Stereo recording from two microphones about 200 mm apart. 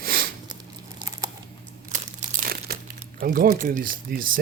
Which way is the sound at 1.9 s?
40° right (ahead or behind).